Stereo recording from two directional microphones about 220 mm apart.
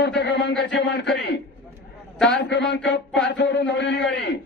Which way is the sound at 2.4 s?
50° left (ahead or behind).